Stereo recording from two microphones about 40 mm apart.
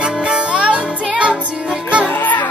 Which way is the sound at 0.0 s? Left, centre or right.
Right.